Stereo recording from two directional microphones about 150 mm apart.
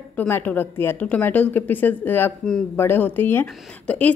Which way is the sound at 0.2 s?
10° left (ahead or behind).